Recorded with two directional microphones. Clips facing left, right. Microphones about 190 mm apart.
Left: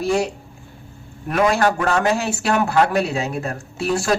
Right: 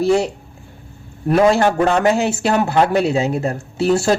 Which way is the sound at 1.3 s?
25° right (ahead or behind).